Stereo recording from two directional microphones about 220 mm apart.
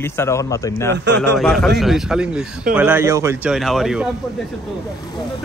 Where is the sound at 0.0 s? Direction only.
10° left (ahead or behind).